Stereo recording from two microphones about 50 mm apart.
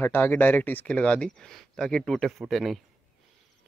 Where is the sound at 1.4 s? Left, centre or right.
Centre.